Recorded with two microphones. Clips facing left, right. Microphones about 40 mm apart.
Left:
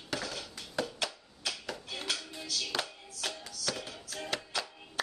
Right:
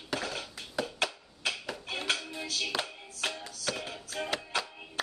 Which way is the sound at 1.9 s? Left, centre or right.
Right.